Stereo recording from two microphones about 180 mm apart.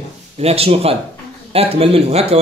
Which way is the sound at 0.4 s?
35° right (ahead or behind).